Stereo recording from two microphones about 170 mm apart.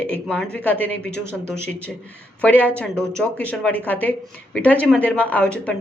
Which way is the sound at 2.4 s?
10° left (ahead or behind).